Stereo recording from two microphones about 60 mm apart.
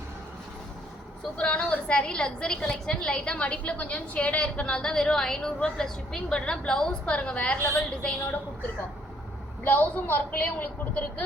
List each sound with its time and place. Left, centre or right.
1.4 s a woman's voice: centre
9.6 s a woman's voice: left